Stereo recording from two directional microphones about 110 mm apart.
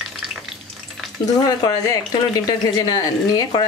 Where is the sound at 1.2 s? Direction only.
35° left (ahead or behind).